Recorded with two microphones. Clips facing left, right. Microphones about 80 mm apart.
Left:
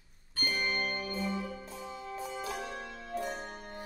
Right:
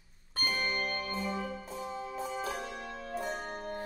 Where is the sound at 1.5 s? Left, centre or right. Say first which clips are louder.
Right 3 dB; centre.